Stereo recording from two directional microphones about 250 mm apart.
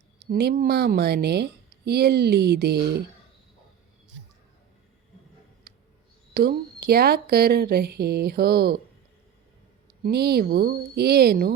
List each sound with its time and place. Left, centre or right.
0.3 s a woman's voice: right
5.7 s a sound: right
6.3 s a woman's voice: right
10.0 s a woman's voice: right